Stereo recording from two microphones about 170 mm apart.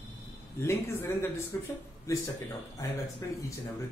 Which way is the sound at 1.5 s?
15° left (ahead or behind).